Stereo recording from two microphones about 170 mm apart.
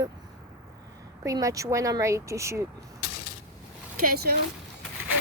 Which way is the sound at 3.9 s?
60° right (ahead or behind).